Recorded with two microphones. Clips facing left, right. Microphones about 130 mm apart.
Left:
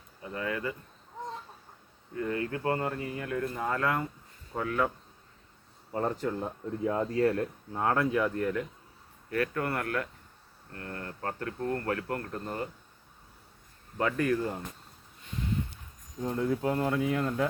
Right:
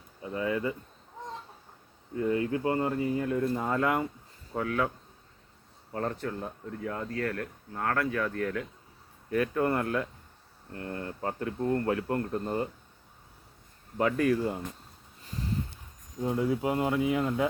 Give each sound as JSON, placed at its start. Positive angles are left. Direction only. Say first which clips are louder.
{"t": 0.2, "sound": "speech", "louder": "right 4 dB", "side_deg": -20}
{"t": 2.1, "sound": "speech", "louder": "right 4 dB", "side_deg": -20}
{"t": 4.5, "sound": "speech", "louder": "even", "side_deg": -5}
{"t": 5.9, "sound": "speech", "louder": "left 2 dB", "side_deg": 15}
{"t": 9.3, "sound": "speech", "louder": "right 3 dB", "side_deg": -20}
{"t": 14.0, "sound": "speech", "louder": "right 2 dB", "side_deg": -10}
{"t": 15.2, "sound": "a sound", "louder": "left 1 dB", "side_deg": -35}
{"t": 16.2, "sound": "speech", "louder": "right 1 dB", "side_deg": -10}